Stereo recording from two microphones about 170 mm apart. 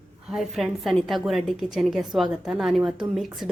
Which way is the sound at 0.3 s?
Centre (ahead or behind).